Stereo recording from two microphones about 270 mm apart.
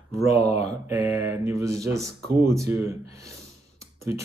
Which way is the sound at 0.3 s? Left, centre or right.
Left.